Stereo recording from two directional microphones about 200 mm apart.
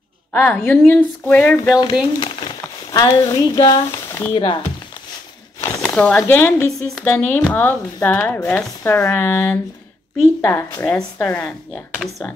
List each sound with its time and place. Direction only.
0.3 s speech: 10° left (ahead or behind)
5.9 s speech: 5° left (ahead or behind)